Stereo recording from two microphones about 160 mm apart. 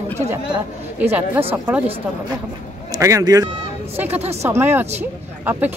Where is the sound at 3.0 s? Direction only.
20° right (ahead or behind).